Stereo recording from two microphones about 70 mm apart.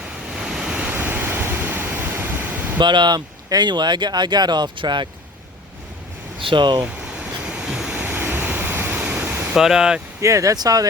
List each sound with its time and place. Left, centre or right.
0.3 s waves: centre
0.8 s waves: right
2.7 s speech: right
6.6 s speech: right
6.8 s a sound: centre
8.0 s vehicle: right
9.6 s speech: centre
10.2 s speech: right
10.5 s speech: right